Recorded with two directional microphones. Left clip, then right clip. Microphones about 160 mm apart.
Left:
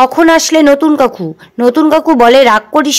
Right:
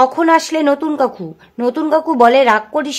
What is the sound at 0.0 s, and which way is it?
Speech, 35° left (ahead or behind).